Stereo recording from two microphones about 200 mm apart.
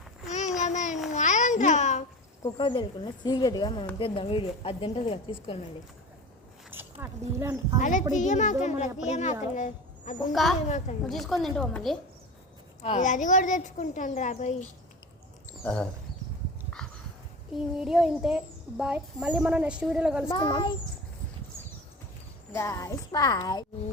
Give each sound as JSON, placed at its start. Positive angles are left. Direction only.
{"t": 0.3, "sound": "a sound", "side_deg": 35}
{"t": 1.1, "sound": "babbling", "side_deg": 35}
{"t": 2.4, "sound": "a woman's voice", "side_deg": 25}
{"t": 6.7, "sound": "speech", "side_deg": -10}
{"t": 7.8, "sound": "speech", "side_deg": 40}
{"t": 10.3, "sound": "a child's voice", "side_deg": 0}
{"t": 10.7, "sound": "speech", "side_deg": 35}
{"t": 11.0, "sound": "a child's voice", "side_deg": 0}
{"t": 12.8, "sound": "speech", "side_deg": 35}
{"t": 15.6, "sound": "a child's voice", "side_deg": 5}
{"t": 17.7, "sound": "a child's voice", "side_deg": 0}
{"t": 20.3, "sound": "a woman's voice", "side_deg": 25}
{"t": 22.5, "sound": "speech", "side_deg": 15}